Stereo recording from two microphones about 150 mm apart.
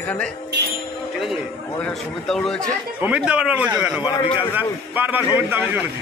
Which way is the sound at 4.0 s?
30° left (ahead or behind).